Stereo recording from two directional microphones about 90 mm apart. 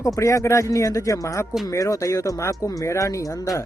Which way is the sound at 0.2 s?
35° left (ahead or behind).